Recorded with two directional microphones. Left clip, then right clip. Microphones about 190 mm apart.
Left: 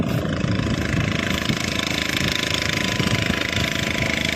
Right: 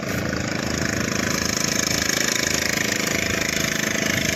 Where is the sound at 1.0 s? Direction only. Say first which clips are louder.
Even; 10° left (ahead or behind).